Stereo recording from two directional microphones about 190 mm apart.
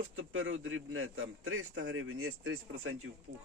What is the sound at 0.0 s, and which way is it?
A man's voice, 90° right.